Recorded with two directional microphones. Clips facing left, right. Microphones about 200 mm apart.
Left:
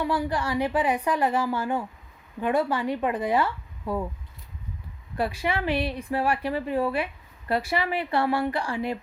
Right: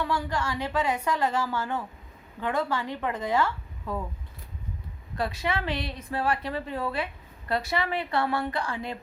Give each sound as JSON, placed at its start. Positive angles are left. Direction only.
{"t": 0.0, "sound": "a woman's voice", "side_deg": 15}
{"t": 5.1, "sound": "a woman's voice", "side_deg": 10}